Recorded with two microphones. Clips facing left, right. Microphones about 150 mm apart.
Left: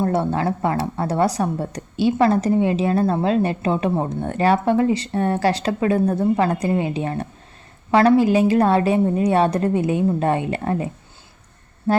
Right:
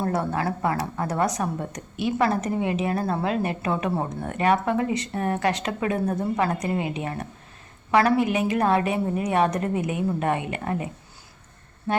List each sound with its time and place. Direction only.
0.1 s a woman's voice: 25° left (ahead or behind)
11.9 s music: 35° left (ahead or behind)